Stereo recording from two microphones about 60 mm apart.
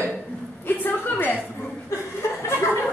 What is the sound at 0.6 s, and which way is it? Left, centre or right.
Speech, left.